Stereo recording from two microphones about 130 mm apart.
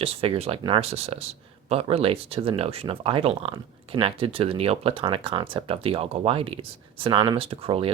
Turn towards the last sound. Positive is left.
turn(degrees=-45)  # may be behind; listen again after turning